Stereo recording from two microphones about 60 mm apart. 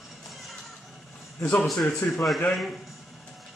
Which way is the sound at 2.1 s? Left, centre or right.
Centre.